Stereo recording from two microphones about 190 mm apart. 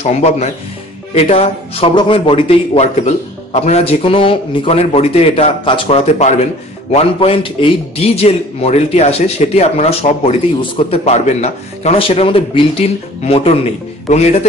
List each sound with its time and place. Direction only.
0.0 s a man's voice: 35° left (ahead or behind)